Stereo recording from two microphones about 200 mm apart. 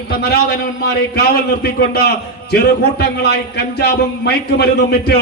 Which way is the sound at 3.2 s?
55° left (ahead or behind).